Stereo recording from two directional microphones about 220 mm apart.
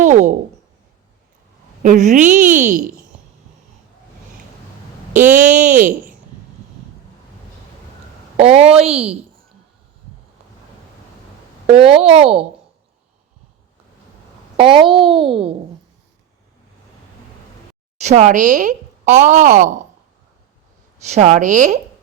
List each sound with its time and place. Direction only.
0.0 s a sound: 35° right (ahead or behind)
1.8 s speech: 35° right (ahead or behind)
5.2 s speech: 10° right (ahead or behind)
5.5 s speech: 35° right (ahead or behind)
8.4 s speech: 25° right (ahead or behind)
11.6 s speech: 25° right (ahead or behind)
14.5 s a child's voice: 25° right (ahead or behind)
18.0 s speech: 30° right (ahead or behind)
21.1 s speech: 30° right (ahead or behind)